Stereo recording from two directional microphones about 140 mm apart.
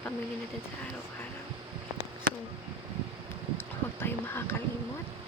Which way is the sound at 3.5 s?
15° left (ahead or behind).